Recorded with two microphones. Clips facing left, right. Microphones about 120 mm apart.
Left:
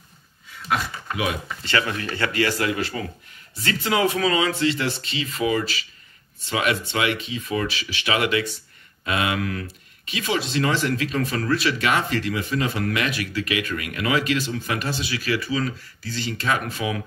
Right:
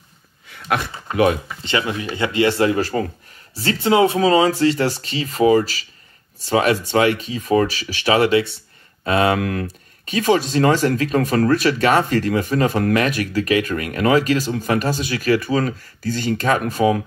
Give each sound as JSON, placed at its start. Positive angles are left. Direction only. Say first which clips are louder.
{"t": 0.6, "sound": "speech", "louder": "right 3 dB", "side_deg": -60}
{"t": 1.1, "sound": "speech", "louder": "right 10 dB", "side_deg": -45}
{"t": 1.6, "sound": "speech", "louder": "right 2 dB", "side_deg": -20}
{"t": 3.5, "sound": "speech", "louder": "right 7 dB", "side_deg": -30}